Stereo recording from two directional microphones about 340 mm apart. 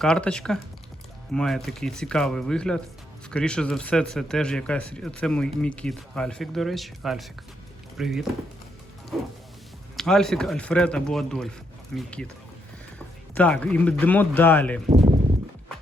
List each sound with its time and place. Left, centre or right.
0.0 s speech: centre
10.0 s speech: centre
13.3 s speech: centre
14.8 s a sound: centre